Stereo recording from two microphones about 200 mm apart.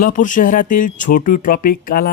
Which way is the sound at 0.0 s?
40° left (ahead or behind).